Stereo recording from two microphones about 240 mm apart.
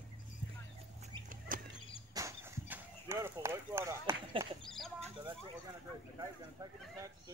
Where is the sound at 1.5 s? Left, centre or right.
Right.